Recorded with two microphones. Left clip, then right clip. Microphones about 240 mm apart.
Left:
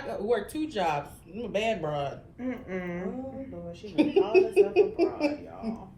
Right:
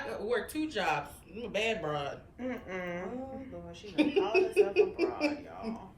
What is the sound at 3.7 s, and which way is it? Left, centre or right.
A woman's voice, centre.